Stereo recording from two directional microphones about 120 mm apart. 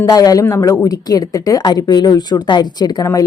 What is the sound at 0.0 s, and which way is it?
A woman's voice, 30° left (ahead or behind).